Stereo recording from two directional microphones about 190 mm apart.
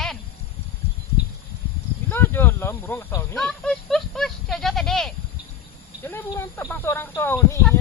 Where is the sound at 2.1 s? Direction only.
10° left (ahead or behind).